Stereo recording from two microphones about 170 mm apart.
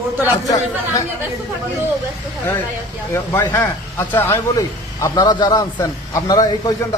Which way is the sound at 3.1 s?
15° left (ahead or behind).